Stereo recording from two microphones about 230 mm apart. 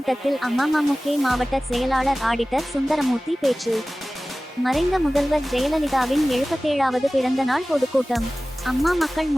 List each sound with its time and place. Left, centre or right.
0.0 s speech: centre